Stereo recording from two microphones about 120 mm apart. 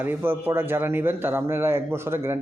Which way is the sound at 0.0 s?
15° right (ahead or behind).